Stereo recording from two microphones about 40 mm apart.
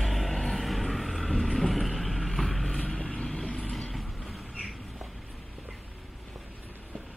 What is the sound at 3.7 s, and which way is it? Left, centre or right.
Vehicle, centre.